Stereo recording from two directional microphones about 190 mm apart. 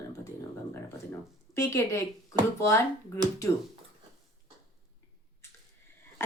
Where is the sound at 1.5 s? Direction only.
15° left (ahead or behind).